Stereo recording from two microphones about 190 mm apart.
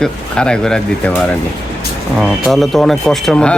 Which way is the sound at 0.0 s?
5° left (ahead or behind).